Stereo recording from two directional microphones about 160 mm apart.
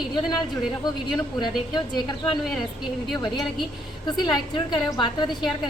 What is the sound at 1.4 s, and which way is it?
A woman's voice, 30° left (ahead or behind).